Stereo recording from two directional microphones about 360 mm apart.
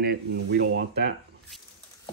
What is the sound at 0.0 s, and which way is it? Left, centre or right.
Speech, right.